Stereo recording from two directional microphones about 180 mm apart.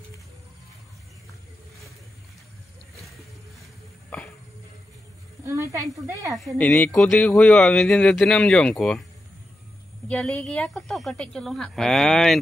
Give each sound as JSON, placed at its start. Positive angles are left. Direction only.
{"t": 5.4, "sound": "speech", "side_deg": -15}
{"t": 6.4, "sound": "speech", "side_deg": 5}
{"t": 10.0, "sound": "speech", "side_deg": 5}